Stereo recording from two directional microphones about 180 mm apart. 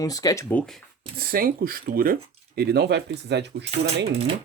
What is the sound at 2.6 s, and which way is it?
Speech, 65° right (ahead or behind).